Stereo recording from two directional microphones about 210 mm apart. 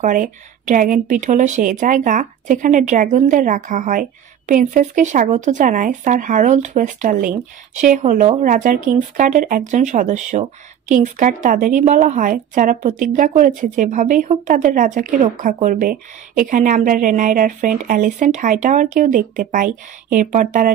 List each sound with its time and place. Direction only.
0.0 s speech: 35° right (ahead or behind)